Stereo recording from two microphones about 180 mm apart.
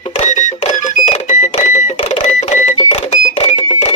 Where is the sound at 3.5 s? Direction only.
30° left (ahead or behind).